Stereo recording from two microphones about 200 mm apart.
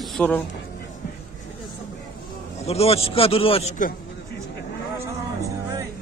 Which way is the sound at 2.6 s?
30° left (ahead or behind).